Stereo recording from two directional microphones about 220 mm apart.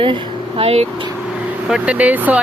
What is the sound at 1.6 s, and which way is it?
Speech, 5° right (ahead or behind).